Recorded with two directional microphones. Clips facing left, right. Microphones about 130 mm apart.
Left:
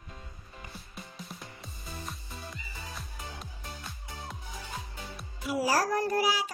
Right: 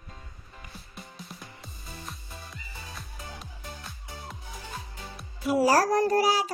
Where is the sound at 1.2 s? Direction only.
Centre (ahead or behind).